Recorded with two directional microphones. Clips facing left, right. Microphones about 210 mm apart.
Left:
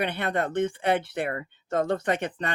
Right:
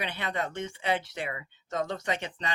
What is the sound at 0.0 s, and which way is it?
Speech, 55° left (ahead or behind).